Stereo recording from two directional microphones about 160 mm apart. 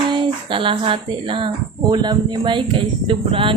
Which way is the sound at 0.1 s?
30° right (ahead or behind).